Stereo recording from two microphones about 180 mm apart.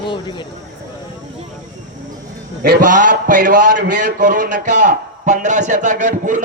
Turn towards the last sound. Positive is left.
turn(degrees=-45)  # may be behind; listen again after turning